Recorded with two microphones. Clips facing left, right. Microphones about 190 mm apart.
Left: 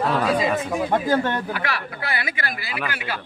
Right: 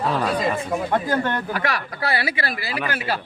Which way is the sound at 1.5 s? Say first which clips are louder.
Right 2 dB; 40° right (ahead or behind).